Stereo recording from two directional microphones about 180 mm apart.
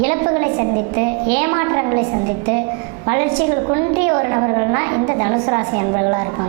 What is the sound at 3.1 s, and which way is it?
A child's voice, 20° right (ahead or behind).